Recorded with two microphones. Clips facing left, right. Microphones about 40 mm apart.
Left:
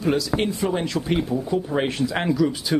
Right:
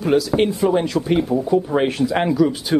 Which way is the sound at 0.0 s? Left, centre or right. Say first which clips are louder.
Right 5 dB; centre.